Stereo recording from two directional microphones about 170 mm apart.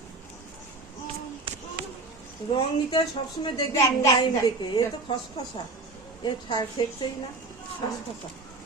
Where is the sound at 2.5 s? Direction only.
30° left (ahead or behind).